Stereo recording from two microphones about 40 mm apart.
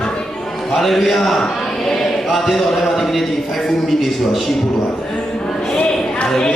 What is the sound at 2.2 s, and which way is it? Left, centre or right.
A man's voice, centre.